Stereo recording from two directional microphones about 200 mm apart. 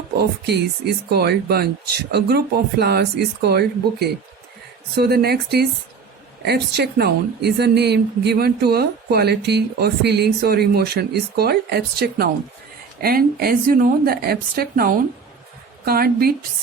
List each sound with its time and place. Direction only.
0.2 s a woman's voice: 55° right (ahead or behind)